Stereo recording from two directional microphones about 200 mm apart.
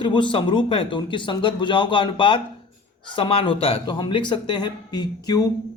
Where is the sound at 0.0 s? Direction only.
25° left (ahead or behind).